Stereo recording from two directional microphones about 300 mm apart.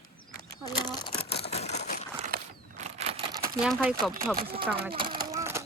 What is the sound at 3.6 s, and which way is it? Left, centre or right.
Speech, centre.